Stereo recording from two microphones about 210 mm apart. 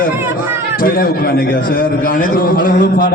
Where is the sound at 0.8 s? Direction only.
45° left (ahead or behind).